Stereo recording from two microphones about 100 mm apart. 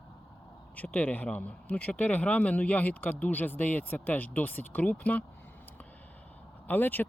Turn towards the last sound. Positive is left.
turn(degrees=20)  # may be behind; listen again after turning